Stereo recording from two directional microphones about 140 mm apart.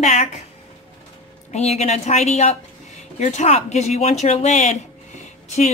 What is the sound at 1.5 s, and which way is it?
Speech, 50° left (ahead or behind).